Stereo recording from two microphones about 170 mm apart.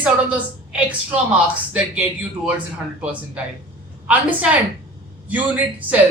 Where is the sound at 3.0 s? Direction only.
10° right (ahead or behind).